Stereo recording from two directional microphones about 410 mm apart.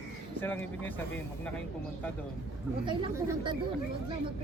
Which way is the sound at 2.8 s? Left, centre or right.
Centre.